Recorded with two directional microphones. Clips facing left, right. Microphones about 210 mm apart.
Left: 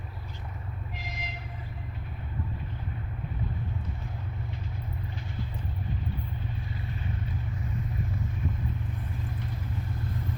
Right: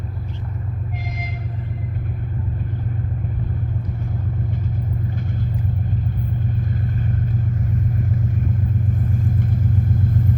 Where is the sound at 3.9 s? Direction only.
50° right (ahead or behind).